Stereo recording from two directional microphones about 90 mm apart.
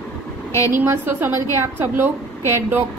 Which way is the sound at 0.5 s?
35° left (ahead or behind).